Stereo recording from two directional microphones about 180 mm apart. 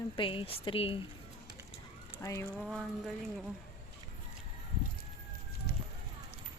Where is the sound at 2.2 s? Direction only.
15° left (ahead or behind).